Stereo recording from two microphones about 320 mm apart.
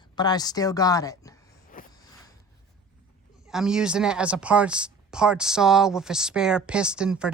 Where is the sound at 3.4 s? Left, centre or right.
Centre.